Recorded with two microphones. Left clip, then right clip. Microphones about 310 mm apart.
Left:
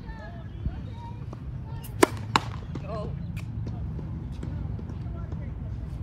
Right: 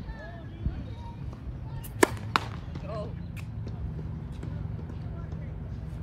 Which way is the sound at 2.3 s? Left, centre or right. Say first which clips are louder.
Left 3 dB; left.